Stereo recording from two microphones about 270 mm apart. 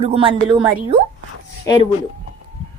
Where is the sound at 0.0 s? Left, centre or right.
Right.